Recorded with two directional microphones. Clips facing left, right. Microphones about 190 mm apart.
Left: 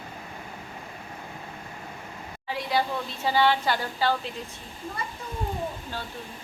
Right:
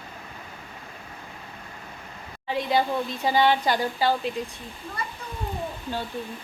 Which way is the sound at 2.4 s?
20° right (ahead or behind).